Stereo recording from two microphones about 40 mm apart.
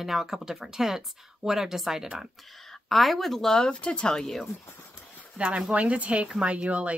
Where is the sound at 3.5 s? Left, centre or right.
Left.